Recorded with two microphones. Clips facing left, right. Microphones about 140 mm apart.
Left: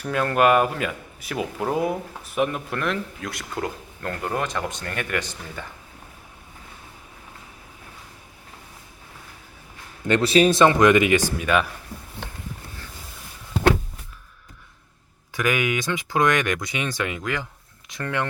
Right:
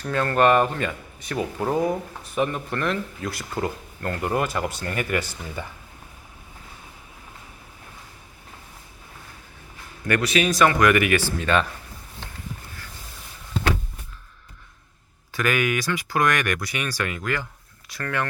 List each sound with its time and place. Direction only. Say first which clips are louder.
0.0 s speech: even; 10° left (ahead or behind); by 5.6 s 10° right (ahead or behind)
10.1 s speech: left 4 dB; 30° left (ahead or behind); by 11.7 s 10° left (ahead or behind)
15.3 s speech: even; 15° left (ahead or behind)